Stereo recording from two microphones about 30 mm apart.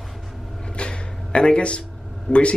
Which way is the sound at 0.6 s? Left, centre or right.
Left.